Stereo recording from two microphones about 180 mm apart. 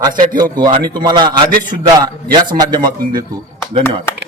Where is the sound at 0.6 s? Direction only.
25° right (ahead or behind).